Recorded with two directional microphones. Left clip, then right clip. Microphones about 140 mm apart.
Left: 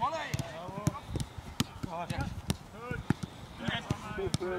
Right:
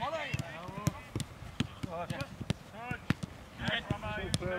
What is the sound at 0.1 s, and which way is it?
Basketball bounce, 10° left (ahead or behind).